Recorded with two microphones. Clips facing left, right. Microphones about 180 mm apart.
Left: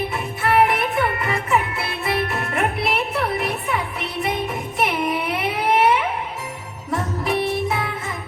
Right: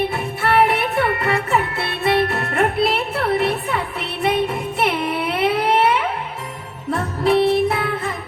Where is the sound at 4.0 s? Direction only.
30° right (ahead or behind).